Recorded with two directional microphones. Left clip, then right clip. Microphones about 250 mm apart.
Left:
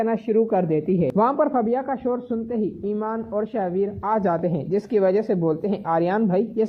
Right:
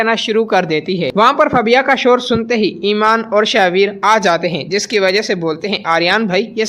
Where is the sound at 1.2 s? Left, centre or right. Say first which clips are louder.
Right 11 dB; right.